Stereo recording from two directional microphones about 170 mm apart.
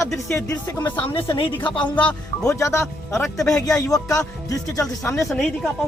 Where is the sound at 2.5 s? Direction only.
15° left (ahead or behind).